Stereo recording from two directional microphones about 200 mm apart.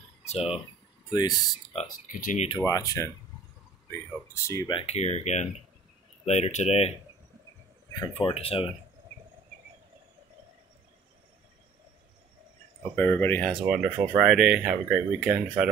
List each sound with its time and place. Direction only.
0.3 s speech: 30° left (ahead or behind)
1.1 s speech: 20° left (ahead or behind)
1.7 s speech: 35° left (ahead or behind)
2.5 s speech: 15° left (ahead or behind)
4.3 s speech: 15° left (ahead or behind); by 6.9 s 35° left (ahead or behind)
8.1 s speech: 25° left (ahead or behind)
12.9 s speech: 10° left (ahead or behind)
13.7 s speech: 5° right (ahead or behind)